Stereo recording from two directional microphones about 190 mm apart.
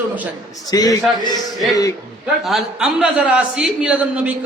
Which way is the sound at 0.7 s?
20° left (ahead or behind).